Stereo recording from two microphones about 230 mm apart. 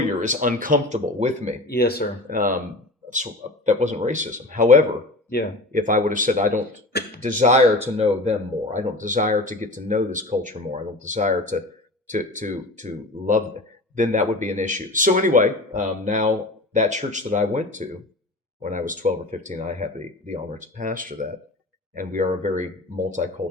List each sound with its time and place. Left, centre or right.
0.2 s speech: right
1.6 s speech: left
2.3 s speech: right
3.7 s speech: right